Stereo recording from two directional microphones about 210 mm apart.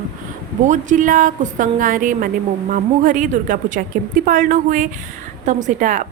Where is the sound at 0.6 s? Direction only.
35° right (ahead or behind).